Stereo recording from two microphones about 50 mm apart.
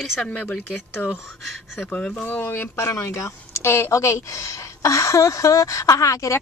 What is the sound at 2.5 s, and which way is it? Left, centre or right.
Speech, left.